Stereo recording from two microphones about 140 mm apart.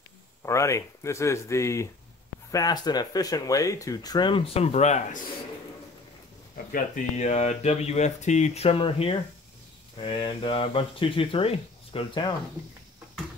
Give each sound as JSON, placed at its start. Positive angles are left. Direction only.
{"t": 0.5, "sound": "speech", "side_deg": 20}
{"t": 6.5, "sound": "speech", "side_deg": 65}